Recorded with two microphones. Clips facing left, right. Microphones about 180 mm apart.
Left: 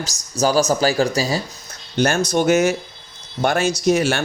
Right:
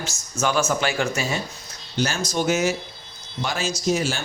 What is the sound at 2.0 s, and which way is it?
Speech, 60° left (ahead or behind).